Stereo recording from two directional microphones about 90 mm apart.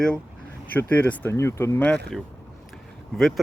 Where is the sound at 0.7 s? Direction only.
20° left (ahead or behind).